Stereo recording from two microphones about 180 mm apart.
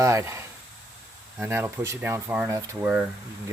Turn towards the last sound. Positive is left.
turn(degrees=-10)  # may be behind; listen again after turning